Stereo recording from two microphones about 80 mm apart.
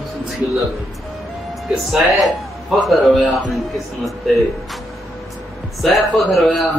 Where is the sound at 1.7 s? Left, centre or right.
Centre.